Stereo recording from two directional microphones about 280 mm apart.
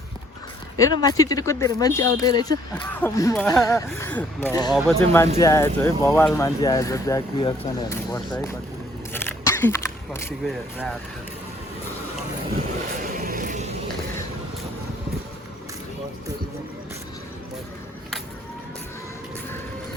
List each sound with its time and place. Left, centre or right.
0.8 s speech: centre
4.7 s speech: centre
13.1 s a sound: right